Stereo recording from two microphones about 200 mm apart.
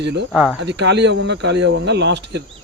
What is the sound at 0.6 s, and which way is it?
Speech, 60° right (ahead or behind).